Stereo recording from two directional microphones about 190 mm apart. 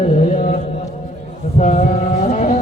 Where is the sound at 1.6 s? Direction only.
35° left (ahead or behind).